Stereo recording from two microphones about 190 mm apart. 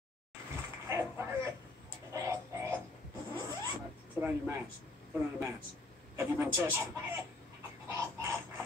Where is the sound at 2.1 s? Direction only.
15° right (ahead or behind).